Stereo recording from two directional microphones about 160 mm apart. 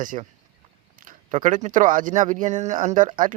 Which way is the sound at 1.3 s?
50° right (ahead or behind).